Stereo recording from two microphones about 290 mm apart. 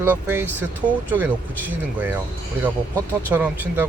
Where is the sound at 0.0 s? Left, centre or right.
Centre.